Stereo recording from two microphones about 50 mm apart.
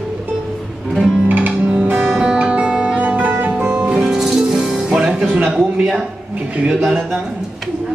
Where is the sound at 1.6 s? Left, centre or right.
Right.